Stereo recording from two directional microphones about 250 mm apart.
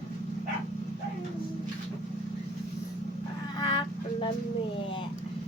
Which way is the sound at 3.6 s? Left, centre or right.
Centre.